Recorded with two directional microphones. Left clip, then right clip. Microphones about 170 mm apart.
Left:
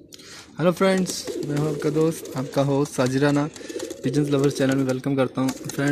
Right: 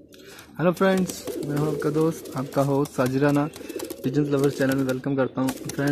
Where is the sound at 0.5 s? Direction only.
15° left (ahead or behind).